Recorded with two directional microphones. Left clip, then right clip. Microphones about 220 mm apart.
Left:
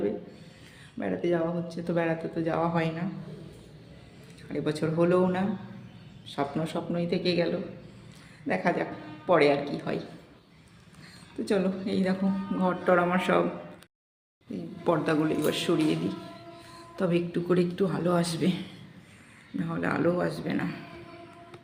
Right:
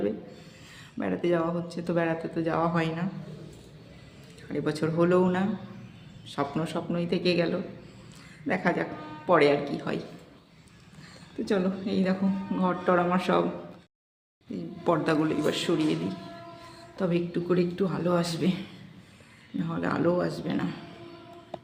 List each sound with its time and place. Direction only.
0.9 s speech: 10° right (ahead or behind)
4.4 s speech: 5° right (ahead or behind)
11.4 s a man's voice: 5° right (ahead or behind)
14.5 s a man's voice: 5° right (ahead or behind)